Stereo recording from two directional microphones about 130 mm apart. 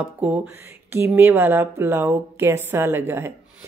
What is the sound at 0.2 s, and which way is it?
Speech, 10° right (ahead or behind).